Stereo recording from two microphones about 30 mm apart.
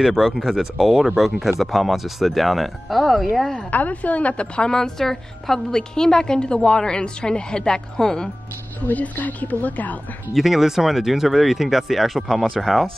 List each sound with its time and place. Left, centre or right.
0.1 s speech: centre
3.7 s a woman's voice: left
4.7 s a woman's voice: centre
8.8 s a woman's voice: left
10.3 s speech: centre
12.4 s speech: centre